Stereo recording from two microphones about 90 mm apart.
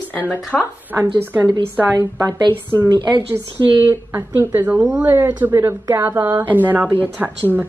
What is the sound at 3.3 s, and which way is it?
A woman's voice, 30° right (ahead or behind).